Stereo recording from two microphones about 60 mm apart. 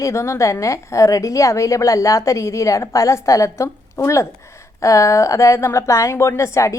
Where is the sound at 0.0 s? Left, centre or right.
Left.